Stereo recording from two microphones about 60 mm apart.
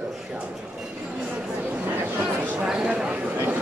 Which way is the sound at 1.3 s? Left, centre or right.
Right.